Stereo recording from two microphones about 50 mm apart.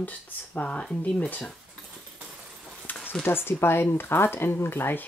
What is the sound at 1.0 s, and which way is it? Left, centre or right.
Speech, left.